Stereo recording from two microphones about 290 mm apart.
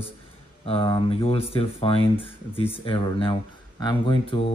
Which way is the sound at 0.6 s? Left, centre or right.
Centre.